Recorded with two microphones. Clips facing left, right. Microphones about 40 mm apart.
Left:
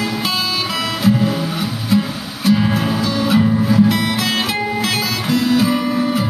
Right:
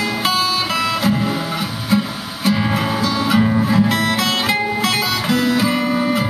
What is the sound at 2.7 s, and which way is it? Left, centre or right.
Music, right.